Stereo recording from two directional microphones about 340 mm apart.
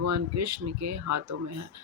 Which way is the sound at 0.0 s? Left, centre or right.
Right.